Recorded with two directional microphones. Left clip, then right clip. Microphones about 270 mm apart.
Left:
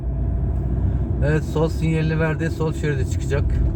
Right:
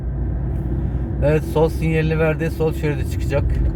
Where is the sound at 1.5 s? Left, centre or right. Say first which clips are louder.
Right 4 dB; centre.